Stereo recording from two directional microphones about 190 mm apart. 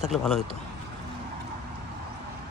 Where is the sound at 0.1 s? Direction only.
Centre (ahead or behind).